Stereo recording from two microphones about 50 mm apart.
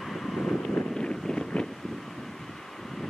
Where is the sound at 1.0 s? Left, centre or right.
Centre.